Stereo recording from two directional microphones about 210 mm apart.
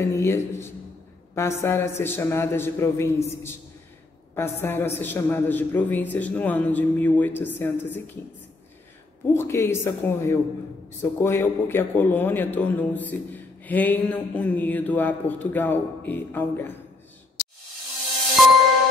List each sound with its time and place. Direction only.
0.1 s a man's voice: 15° left (ahead or behind)
9.3 s a man's voice: 10° left (ahead or behind)